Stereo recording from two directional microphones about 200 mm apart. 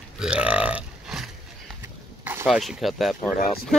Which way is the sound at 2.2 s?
10° right (ahead or behind).